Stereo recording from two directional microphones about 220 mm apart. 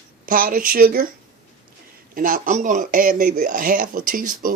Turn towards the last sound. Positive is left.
turn(degrees=-40)  # may be behind; listen again after turning